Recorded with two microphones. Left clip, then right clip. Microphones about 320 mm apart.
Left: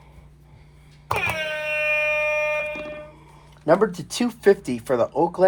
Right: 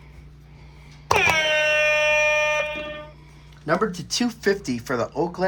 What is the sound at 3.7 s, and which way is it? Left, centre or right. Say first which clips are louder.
Speech: left 4 dB; centre.